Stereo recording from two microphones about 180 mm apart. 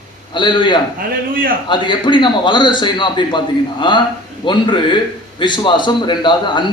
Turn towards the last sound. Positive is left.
turn(degrees=25)  # may be behind; listen again after turning